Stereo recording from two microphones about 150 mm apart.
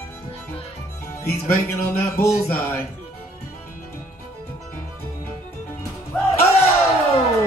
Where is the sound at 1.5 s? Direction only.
15° left (ahead or behind).